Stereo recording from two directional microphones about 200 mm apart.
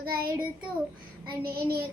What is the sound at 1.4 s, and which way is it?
Child singing, 50° right (ahead or behind).